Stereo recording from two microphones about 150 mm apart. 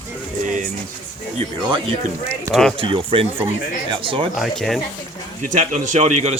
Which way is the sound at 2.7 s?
35° right (ahead or behind).